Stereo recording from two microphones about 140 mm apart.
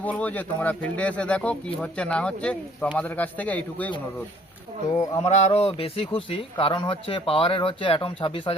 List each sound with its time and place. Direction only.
0.0 s speech: 10° left (ahead or behind)
4.9 s a sound: 25° left (ahead or behind)
5.2 s speech: 50° left (ahead or behind)